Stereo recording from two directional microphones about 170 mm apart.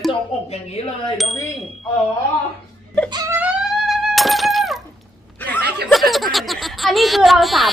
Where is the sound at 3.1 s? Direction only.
20° right (ahead or behind).